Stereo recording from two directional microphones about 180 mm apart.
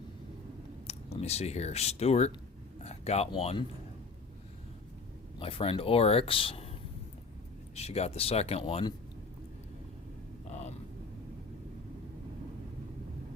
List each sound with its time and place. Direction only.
0.9 s speech: 35° left (ahead or behind)
5.4 s speech: 30° left (ahead or behind)
7.8 s speech: 35° left (ahead or behind)